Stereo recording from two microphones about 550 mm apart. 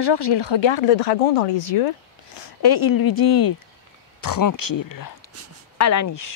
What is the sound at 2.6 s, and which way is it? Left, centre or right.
Speech, left.